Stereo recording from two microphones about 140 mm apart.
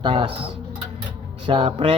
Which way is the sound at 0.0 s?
35° right (ahead or behind).